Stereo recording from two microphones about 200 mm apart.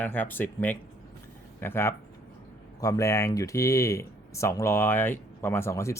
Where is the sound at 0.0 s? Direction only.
10° left (ahead or behind).